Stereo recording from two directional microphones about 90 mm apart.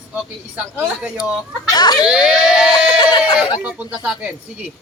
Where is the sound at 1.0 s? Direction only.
10° right (ahead or behind).